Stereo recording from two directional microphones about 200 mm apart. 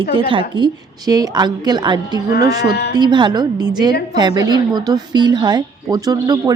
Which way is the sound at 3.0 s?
20° right (ahead or behind).